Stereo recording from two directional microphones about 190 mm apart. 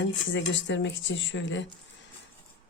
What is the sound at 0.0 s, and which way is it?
Speech, 75° left (ahead or behind).